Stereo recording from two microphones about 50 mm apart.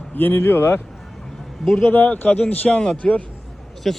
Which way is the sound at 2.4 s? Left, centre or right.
Left.